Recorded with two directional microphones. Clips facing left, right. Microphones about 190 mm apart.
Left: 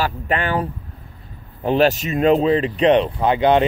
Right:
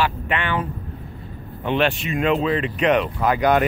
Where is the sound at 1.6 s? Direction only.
40° left (ahead or behind).